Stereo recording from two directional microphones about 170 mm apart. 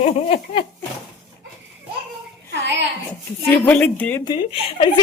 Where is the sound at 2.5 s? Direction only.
90° right.